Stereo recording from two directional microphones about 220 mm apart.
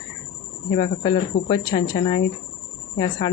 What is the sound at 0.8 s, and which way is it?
Speech, 20° left (ahead or behind).